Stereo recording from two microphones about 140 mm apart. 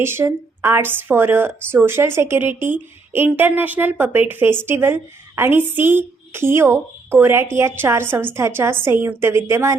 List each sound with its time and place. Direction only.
0.0 s speech: 15° right (ahead or behind)